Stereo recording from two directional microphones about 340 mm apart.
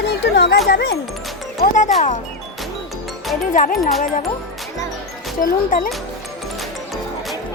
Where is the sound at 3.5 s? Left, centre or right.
Left.